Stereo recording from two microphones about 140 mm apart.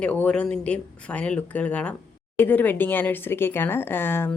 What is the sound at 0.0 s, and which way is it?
Speech, 10° left (ahead or behind).